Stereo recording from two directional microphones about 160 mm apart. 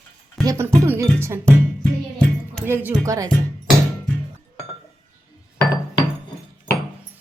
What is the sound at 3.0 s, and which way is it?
Speech, 20° right (ahead or behind).